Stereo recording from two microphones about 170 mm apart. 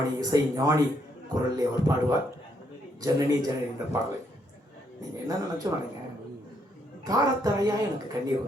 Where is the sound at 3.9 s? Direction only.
20° right (ahead or behind).